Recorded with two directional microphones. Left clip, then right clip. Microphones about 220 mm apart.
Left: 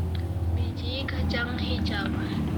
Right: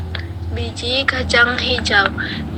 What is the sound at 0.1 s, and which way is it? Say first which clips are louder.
A woman's voice: right 8 dB; 40° right (ahead or behind).